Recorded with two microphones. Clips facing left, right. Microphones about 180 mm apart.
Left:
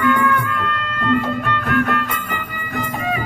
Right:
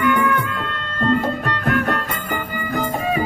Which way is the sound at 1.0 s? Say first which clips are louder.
Right 1 dB; 40° right (ahead or behind).